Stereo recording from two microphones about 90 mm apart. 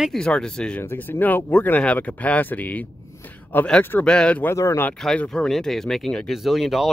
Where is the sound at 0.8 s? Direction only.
25° left (ahead or behind).